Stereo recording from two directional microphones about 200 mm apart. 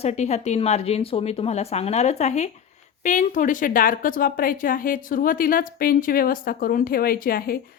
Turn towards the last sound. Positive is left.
turn(degrees=45)  # may be behind; listen again after turning